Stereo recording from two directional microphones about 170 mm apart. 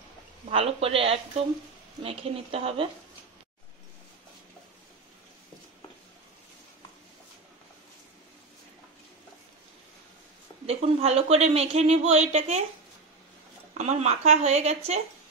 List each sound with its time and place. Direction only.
0.5 s speech: 35° right (ahead or behind)
10.7 s speech: 35° right (ahead or behind)
13.7 s speech: 40° right (ahead or behind)